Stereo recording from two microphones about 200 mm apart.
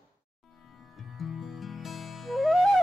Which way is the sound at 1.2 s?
Centre (ahead or behind).